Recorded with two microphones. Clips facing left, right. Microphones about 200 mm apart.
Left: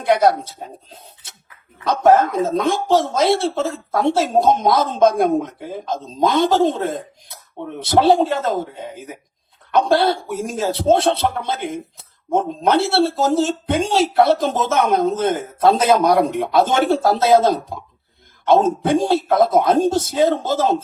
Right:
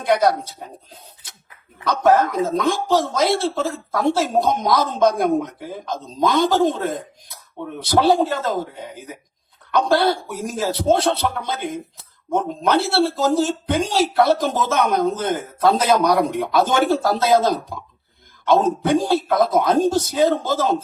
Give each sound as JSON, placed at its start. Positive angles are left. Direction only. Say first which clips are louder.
{"t": 0.0, "sound": "speech", "louder": "left 2 dB", "side_deg": 25}